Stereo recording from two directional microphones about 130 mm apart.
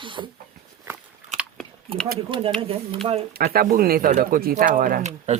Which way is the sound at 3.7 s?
90° right.